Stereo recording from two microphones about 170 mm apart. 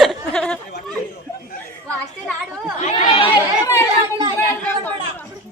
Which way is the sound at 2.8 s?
40° left (ahead or behind).